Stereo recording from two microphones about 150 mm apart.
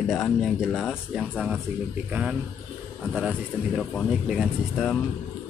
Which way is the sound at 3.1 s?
Centre (ahead or behind).